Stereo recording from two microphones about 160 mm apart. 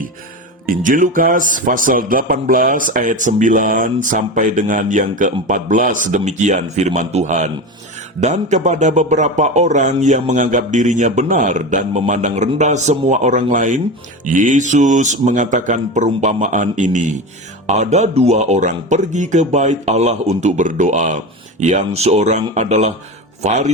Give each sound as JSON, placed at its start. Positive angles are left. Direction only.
{"t": 0.7, "sound": "a man's voice", "side_deg": -55}